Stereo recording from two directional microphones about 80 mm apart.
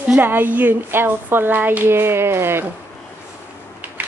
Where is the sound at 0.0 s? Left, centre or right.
Right.